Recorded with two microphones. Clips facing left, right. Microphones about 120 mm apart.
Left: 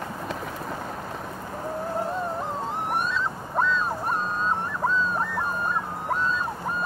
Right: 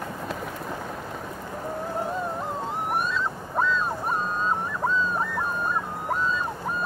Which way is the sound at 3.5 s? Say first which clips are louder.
Even; centre (ahead or behind).